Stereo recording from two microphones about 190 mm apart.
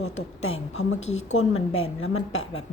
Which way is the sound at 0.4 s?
90° left.